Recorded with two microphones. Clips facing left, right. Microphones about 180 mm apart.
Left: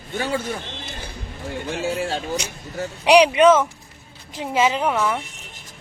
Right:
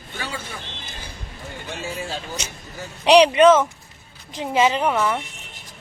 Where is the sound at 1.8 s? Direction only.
70° left (ahead or behind).